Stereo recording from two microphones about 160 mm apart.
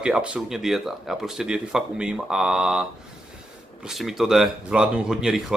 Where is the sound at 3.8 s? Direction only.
Centre (ahead or behind).